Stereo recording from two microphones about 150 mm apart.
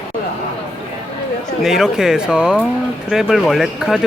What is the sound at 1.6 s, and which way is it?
Speech, 5° right (ahead or behind).